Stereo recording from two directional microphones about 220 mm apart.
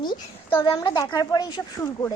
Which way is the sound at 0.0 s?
20° left (ahead or behind).